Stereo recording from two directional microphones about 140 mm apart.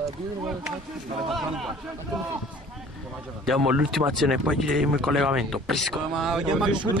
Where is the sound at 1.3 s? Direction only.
Centre (ahead or behind).